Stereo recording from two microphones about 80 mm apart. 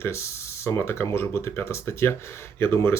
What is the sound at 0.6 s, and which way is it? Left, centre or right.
Speech, left.